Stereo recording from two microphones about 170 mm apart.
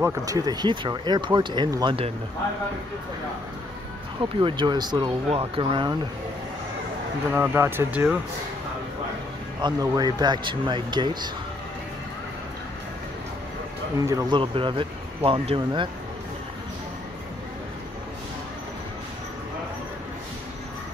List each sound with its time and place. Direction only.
0.0 s speech: 20° right (ahead or behind)
4.2 s speech: 30° right (ahead or behind)
7.2 s speech: 15° right (ahead or behind)
9.6 s speech: 25° right (ahead or behind)
13.9 s speech: 20° right (ahead or behind)
14.4 s speech: 30° right (ahead or behind)